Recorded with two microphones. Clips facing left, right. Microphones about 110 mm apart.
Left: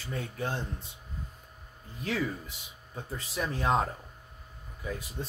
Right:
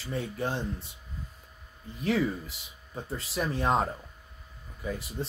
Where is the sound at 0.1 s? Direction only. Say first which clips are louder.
Right 3 dB; centre (ahead or behind).